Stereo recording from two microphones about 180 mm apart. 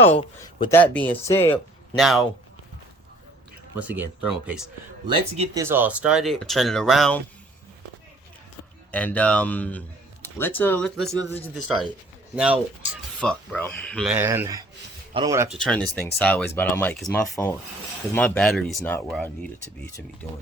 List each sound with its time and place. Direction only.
0.2 s speech: 30° left (ahead or behind)
0.7 s speech: 10° left (ahead or behind)
2.0 s speech: centre (ahead or behind)
3.8 s speech: 10° right (ahead or behind)
5.0 s speech: 25° right (ahead or behind)
5.6 s speech: 10° right (ahead or behind)
8.9 s speech: 10° left (ahead or behind)
13.1 s speech: 5° left (ahead or behind)
14.1 s speech: 10° right (ahead or behind)
15.4 s speech: 5° left (ahead or behind)